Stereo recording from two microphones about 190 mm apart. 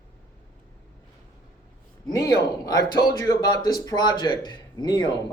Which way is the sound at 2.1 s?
20° left (ahead or behind).